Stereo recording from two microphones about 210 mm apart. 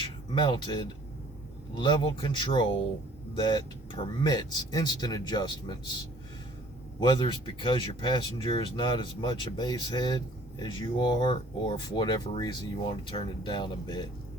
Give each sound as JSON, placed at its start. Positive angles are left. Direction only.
{"t": 0.3, "sound": "speech", "side_deg": 20}
{"t": 7.0, "sound": "speech", "side_deg": 20}